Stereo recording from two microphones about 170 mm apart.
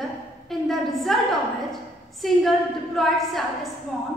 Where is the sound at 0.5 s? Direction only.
Centre (ahead or behind).